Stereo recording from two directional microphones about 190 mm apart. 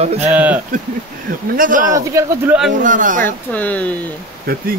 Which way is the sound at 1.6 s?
45° right (ahead or behind).